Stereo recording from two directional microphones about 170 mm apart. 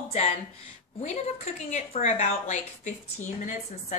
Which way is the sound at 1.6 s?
45° left (ahead or behind).